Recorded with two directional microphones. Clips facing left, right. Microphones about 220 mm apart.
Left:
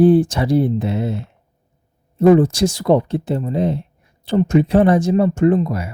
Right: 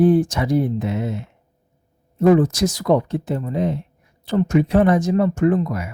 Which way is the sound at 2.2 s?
30° left (ahead or behind).